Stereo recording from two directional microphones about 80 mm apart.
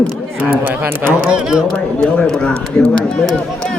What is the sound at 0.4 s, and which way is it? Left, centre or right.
Speech, right.